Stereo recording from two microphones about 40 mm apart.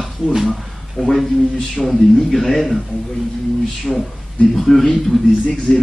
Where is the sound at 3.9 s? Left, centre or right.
Centre.